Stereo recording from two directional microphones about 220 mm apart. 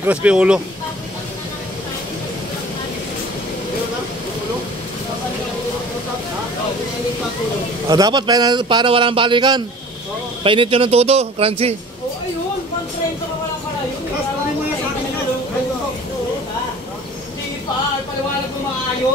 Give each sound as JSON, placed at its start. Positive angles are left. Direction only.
{"t": 0.0, "sound": "speech", "side_deg": -5}
{"t": 7.9, "sound": "a man's voice", "side_deg": -20}